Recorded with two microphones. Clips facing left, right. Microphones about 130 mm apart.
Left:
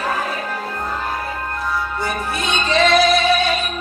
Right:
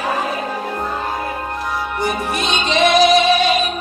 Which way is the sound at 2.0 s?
20° right (ahead or behind).